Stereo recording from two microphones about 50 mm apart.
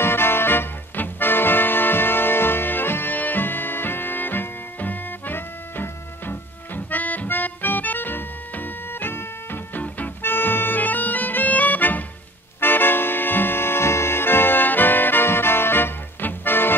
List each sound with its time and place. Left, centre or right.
0.0 s music: left
10.2 s music: left
12.5 s accordion: left